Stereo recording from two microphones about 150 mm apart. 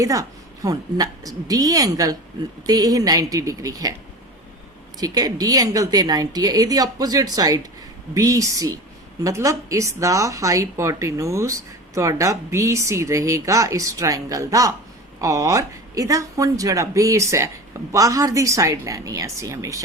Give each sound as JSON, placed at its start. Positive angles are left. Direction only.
{"t": 0.0, "sound": "speech", "side_deg": -20}
{"t": 4.9, "sound": "speech", "side_deg": -25}